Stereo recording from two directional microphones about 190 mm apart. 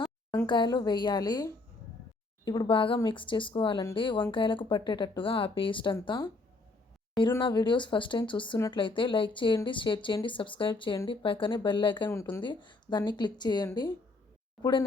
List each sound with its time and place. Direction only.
0.4 s a woman's voice: 25° left (ahead or behind)